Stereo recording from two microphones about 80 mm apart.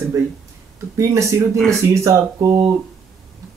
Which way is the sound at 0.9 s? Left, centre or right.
Right.